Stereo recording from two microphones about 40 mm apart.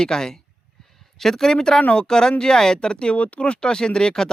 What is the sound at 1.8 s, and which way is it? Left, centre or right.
Speech, left.